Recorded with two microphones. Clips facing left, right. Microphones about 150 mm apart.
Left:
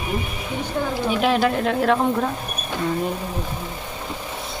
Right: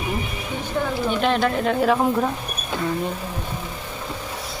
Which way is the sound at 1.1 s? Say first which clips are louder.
Left 2 dB; 5° left (ahead or behind).